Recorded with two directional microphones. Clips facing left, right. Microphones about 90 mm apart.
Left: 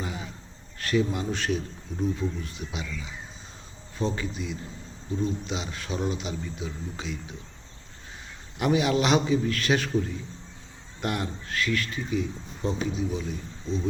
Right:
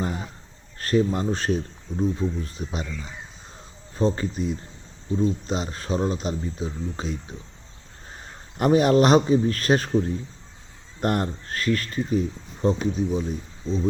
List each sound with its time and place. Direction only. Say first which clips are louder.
0.0 s a sound: right 6 dB; 45° right (ahead or behind)
0.8 s speech: right 4 dB; 40° right (ahead or behind)
8.5 s speech: right 6 dB; 45° right (ahead or behind)